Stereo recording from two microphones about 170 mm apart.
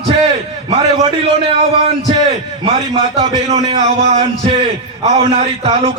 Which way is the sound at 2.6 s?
35° right (ahead or behind).